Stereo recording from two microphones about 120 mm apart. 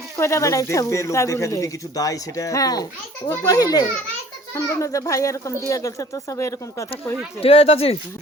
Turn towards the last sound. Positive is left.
turn(degrees=55)  # may be behind; listen again after turning